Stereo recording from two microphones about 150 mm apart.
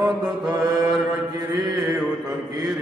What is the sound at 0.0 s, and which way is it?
Mantra, 25° right (ahead or behind).